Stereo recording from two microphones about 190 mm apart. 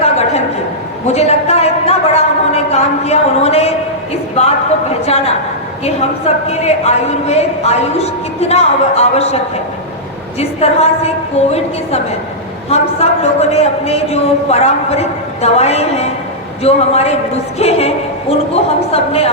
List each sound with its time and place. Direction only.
0.0 s a sound: 35° left (ahead or behind)
1.0 s a woman's voice: 35° left (ahead or behind)
5.0 s a woman's voice: 35° left (ahead or behind)
12.7 s a woman's voice: 35° left (ahead or behind)